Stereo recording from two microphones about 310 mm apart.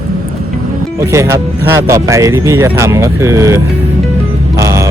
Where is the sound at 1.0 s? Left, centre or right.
Centre.